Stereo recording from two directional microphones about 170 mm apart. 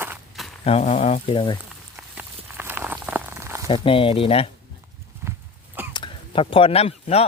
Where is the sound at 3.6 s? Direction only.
30° left (ahead or behind).